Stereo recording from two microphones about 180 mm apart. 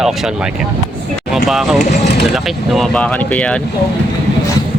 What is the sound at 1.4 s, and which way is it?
Speech, centre (ahead or behind).